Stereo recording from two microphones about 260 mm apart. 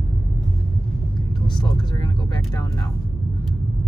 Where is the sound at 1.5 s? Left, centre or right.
Centre.